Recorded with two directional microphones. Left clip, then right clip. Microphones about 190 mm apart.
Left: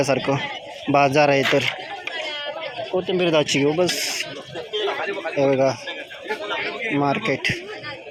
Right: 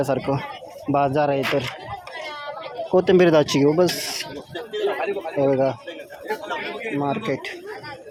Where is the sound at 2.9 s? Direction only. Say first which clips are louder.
Right 7 dB; 35° right (ahead or behind).